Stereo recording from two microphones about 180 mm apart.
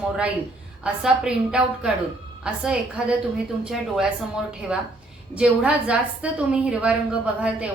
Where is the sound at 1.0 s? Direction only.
5° right (ahead or behind).